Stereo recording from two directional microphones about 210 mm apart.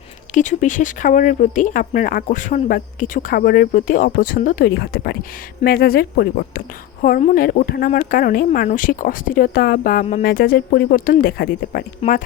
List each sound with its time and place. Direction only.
0.3 s speech: 35° left (ahead or behind)